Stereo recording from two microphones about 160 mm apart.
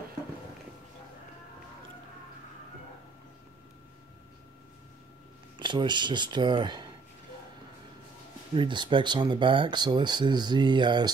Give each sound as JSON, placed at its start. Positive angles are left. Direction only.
{"t": 5.6, "sound": "speech", "side_deg": -30}
{"t": 8.5, "sound": "speech", "side_deg": -30}